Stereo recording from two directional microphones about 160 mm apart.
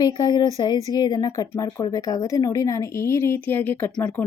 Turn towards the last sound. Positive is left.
turn(degrees=10)  # may be behind; listen again after turning